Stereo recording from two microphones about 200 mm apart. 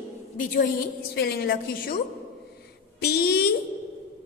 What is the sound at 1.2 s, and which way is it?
Speech, 55° left (ahead or behind).